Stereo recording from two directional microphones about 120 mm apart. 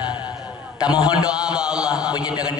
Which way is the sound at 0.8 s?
10° right (ahead or behind).